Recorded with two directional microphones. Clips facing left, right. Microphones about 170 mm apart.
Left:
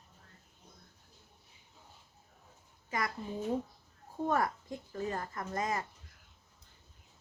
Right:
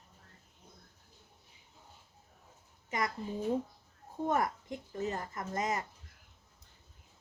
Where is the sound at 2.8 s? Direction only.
20° right (ahead or behind).